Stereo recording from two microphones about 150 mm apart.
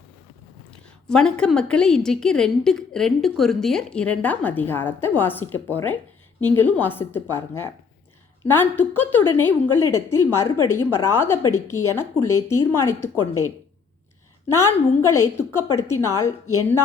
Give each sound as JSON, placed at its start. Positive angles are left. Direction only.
{"t": 1.0, "sound": "a woman's voice", "side_deg": 5}